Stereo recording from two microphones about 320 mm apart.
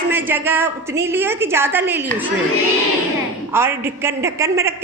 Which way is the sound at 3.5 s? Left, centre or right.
Centre.